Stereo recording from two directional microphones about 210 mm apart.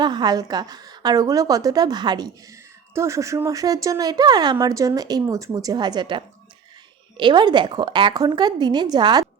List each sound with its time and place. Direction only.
0.0 s a woman's voice: 20° right (ahead or behind)